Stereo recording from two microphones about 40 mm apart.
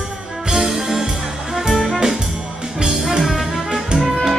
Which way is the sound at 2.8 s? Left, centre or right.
Centre.